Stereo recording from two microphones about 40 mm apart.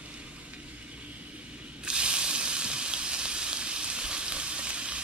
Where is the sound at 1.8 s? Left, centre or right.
Right.